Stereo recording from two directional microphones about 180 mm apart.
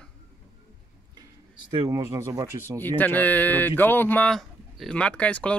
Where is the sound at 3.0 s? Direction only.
10° left (ahead or behind).